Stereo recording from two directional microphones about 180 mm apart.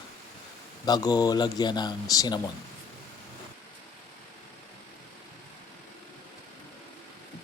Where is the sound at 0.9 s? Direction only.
20° left (ahead or behind).